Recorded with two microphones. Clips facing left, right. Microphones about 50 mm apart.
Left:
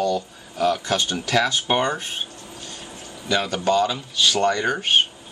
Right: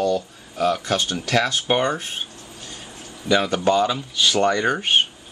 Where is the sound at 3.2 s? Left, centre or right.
Centre.